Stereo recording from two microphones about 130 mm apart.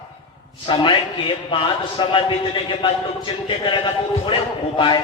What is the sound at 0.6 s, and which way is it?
A man's voice, 40° left (ahead or behind).